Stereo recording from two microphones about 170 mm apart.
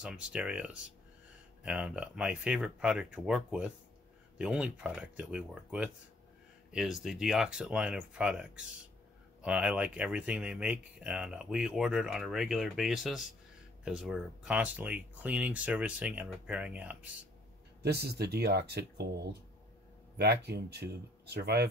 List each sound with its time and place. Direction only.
0.0 s speech: 5° right (ahead or behind)
17.8 s speech: 70° right (ahead or behind)